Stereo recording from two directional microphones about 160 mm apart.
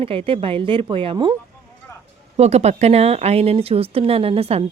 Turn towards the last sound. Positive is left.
turn(degrees=-40)  # may be behind; listen again after turning